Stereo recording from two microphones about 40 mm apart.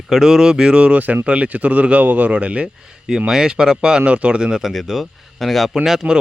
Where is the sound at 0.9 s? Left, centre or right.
Right.